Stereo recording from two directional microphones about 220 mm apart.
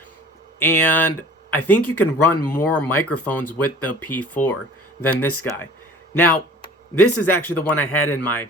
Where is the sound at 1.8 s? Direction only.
90° left.